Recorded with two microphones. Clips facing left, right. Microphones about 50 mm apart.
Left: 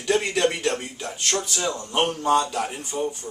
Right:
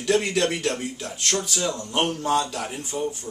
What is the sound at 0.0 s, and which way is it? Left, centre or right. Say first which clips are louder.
Speech: even; centre.